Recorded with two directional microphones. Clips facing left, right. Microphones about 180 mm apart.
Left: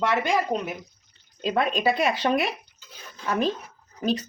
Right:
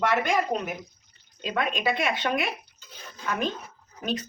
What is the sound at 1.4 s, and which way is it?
A woman's voice, 35° left (ahead or behind).